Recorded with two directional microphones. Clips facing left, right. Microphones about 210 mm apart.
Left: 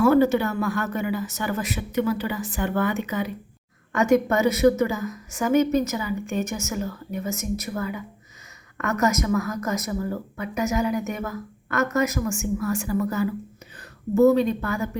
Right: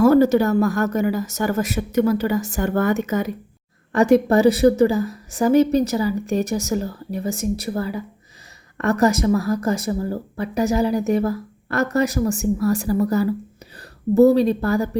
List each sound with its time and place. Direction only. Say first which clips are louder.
0.0 s speech: right 4 dB; 40° right (ahead or behind)
3.9 s a woman's voice: right 5 dB; 35° right (ahead or behind)